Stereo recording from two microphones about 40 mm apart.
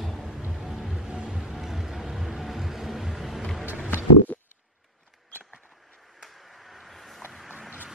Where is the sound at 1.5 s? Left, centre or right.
Centre.